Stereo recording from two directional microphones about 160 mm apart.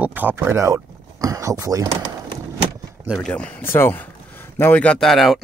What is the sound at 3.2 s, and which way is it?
Speech, 10° left (ahead or behind).